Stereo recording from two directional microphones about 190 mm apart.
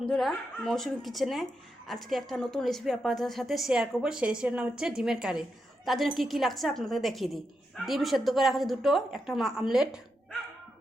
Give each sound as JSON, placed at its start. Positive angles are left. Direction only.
{"t": 0.0, "sound": "a woman's voice", "side_deg": 0}